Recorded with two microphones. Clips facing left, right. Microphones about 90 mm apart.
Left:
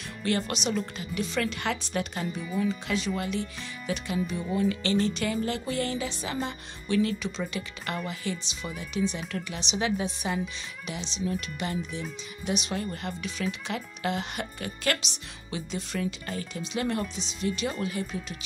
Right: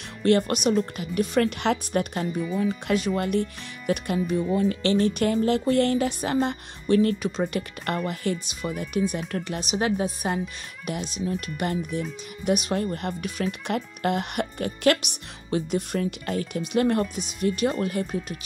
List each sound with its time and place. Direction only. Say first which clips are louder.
0.2 s speech: right 8 dB; 55° right (ahead or behind)